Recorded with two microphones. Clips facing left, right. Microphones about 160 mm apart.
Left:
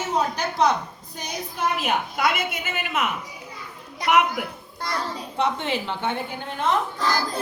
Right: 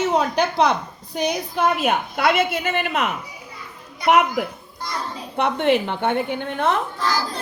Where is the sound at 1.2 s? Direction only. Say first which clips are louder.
Right 8 dB; 65° right (ahead or behind).